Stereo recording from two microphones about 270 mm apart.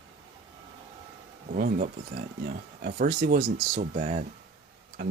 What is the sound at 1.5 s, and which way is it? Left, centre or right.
Speech, right.